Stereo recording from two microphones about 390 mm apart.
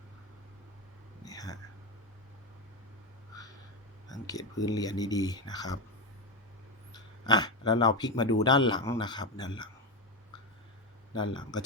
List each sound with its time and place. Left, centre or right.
1.2 s whispering: centre
4.1 s speech: centre
6.9 s speech: centre
11.1 s speech: centre